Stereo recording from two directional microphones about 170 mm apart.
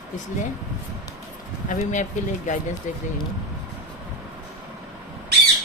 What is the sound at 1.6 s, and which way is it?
Speech, 45° left (ahead or behind).